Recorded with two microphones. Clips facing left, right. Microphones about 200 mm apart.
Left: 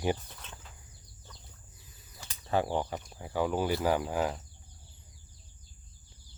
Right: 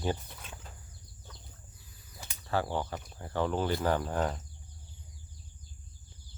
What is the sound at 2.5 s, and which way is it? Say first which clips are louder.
Speech: left 2 dB; 15° left (ahead or behind).